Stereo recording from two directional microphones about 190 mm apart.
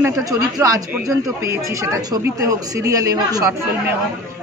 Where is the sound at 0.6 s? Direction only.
15° right (ahead or behind).